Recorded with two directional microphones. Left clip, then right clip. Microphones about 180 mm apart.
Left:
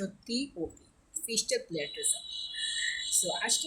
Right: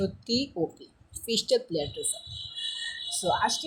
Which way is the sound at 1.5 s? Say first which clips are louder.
Right 9 dB; 15° right (ahead or behind).